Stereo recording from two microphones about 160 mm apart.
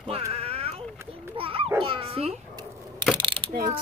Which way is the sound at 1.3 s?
35° right (ahead or behind).